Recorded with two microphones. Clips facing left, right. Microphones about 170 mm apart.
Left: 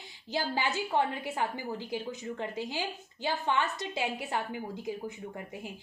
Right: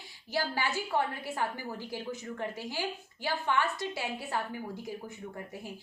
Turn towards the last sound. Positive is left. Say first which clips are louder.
# left 2 dB
turn(degrees=20)  # may be behind; listen again after turning